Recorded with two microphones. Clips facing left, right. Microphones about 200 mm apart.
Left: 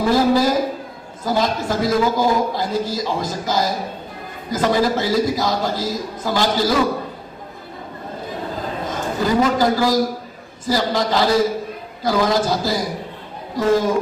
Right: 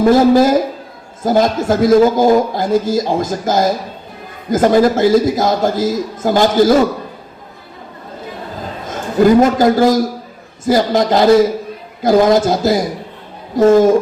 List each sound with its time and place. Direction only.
0.0 s a man's voice: 50° right (ahead or behind)
9.2 s a man's voice: 50° right (ahead or behind)